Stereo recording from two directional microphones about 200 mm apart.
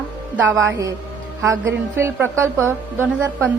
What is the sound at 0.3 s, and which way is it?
A woman's voice, 10° right (ahead or behind).